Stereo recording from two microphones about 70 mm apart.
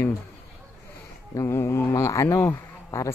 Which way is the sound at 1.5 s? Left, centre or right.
Left.